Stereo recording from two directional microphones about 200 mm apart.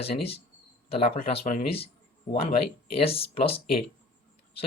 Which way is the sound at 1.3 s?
30° left (ahead or behind).